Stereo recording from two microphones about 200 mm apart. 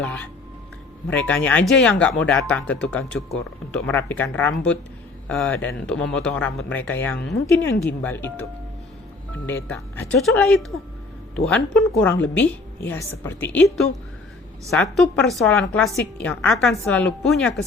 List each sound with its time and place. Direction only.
1.0 s speech: 5° left (ahead or behind)
9.6 s speech: 5° left (ahead or behind)
12.1 s a woman's voice: 70° left (ahead or behind)
12.4 s speech: 10° left (ahead or behind)